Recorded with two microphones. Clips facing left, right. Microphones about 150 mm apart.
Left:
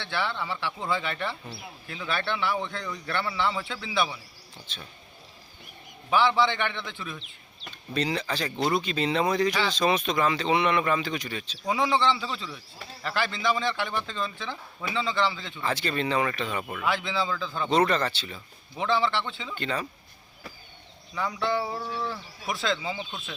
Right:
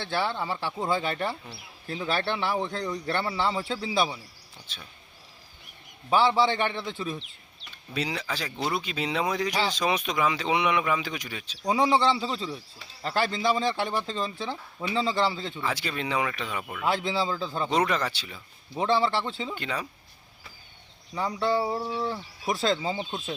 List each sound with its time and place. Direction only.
0.0 s speech: 40° right (ahead or behind)
4.7 s speech: 10° right (ahead or behind)
6.1 s speech: 35° right (ahead or behind)
7.9 s speech: 10° right (ahead or behind)
11.6 s speech: 30° right (ahead or behind)
15.6 s speech: 10° right (ahead or behind)
16.8 s speech: 40° right (ahead or behind)
17.7 s speech: 10° right (ahead or behind)
18.8 s speech: 40° right (ahead or behind)
19.5 s speech: 10° right (ahead or behind)
21.2 s speech: 35° right (ahead or behind)
22.5 s speech: 40° right (ahead or behind)